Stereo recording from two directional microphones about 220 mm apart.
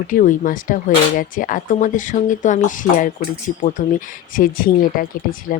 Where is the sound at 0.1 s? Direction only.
40° left (ahead or behind).